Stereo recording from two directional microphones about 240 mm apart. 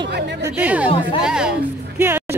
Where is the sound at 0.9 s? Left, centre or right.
Left.